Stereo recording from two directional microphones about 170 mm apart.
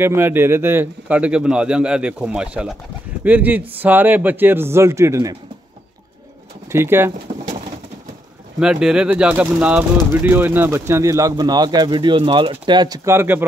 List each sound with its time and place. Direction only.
0.0 s speech: 15° right (ahead or behind)
6.7 s speech: 15° right (ahead or behind)
7.3 s pigeon: 40° right (ahead or behind)
8.5 s speech: 5° right (ahead or behind)